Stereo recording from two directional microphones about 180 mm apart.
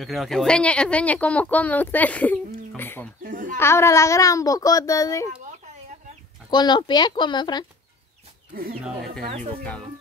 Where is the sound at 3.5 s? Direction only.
15° left (ahead or behind).